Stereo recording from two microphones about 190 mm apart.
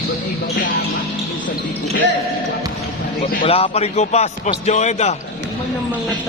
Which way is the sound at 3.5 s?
30° left (ahead or behind).